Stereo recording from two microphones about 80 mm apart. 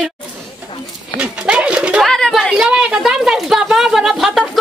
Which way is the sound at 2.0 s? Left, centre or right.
Centre.